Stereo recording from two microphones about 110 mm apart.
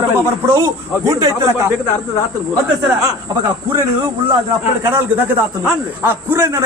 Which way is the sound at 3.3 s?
40° right (ahead or behind).